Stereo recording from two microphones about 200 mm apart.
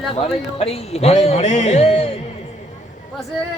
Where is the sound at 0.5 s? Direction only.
30° left (ahead or behind).